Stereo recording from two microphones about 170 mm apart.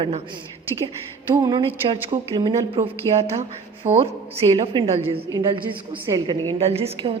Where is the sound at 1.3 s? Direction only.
25° right (ahead or behind).